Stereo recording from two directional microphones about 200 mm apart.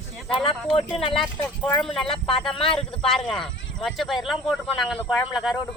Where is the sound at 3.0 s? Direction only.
Centre (ahead or behind).